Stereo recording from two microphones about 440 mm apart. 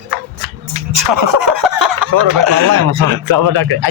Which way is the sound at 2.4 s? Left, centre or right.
Right.